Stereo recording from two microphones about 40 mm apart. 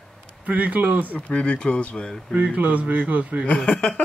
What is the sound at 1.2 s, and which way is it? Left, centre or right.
Speech, left.